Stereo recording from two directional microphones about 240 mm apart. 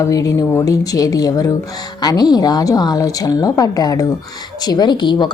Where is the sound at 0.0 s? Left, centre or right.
Centre.